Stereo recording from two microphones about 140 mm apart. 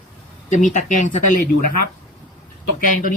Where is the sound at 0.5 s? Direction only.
65° left (ahead or behind).